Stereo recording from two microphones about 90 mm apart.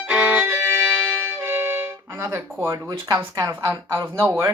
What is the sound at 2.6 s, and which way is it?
Speech, 35° right (ahead or behind).